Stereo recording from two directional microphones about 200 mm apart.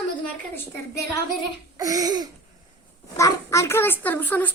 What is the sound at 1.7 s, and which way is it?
Laughter, 15° right (ahead or behind).